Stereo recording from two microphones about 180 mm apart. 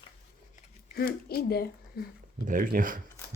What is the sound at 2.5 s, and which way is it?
Speech, 50° right (ahead or behind).